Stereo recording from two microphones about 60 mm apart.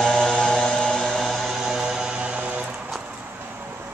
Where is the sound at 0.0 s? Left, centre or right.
Centre.